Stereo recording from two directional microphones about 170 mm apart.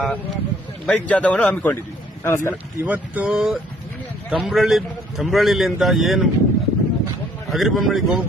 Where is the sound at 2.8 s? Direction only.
10° right (ahead or behind).